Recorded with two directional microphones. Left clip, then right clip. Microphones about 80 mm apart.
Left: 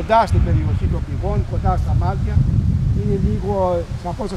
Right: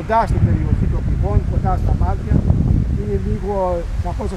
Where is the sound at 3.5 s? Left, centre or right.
Left.